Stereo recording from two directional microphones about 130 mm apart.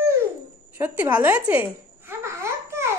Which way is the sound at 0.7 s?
15° right (ahead or behind).